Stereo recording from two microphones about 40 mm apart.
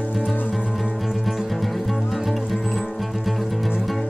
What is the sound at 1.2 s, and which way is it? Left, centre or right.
Music, centre.